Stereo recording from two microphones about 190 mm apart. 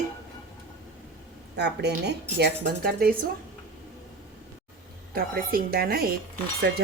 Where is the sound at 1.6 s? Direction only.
60° right (ahead or behind).